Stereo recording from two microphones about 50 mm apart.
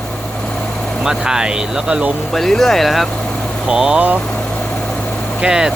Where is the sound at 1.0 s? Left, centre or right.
Centre.